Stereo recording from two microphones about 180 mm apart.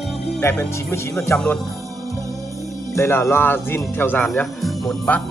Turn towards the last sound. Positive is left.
turn(degrees=0)  # may be behind; listen again after turning